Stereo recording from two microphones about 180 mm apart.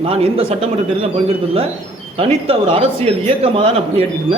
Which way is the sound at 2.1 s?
30° right (ahead or behind).